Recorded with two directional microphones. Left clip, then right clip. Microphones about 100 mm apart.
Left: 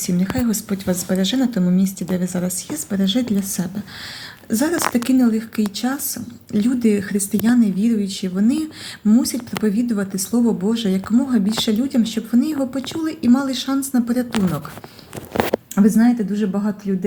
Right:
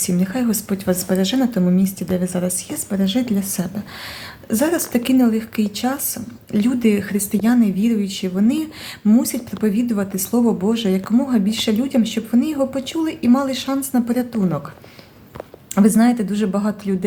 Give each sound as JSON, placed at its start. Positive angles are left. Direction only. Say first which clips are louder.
{"t": 0.0, "sound": "speech", "louder": "right 1 dB", "side_deg": -30}
{"t": 15.7, "sound": "speech", "louder": "right 3 dB", "side_deg": -35}